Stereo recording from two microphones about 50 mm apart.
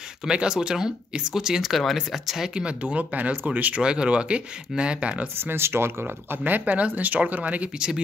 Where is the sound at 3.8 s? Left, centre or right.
Centre.